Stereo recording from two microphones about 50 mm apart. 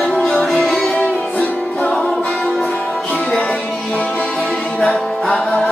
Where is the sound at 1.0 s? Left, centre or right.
Left.